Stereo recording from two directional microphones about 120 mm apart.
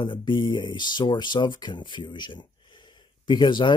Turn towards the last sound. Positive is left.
turn(degrees=40)  # may be behind; listen again after turning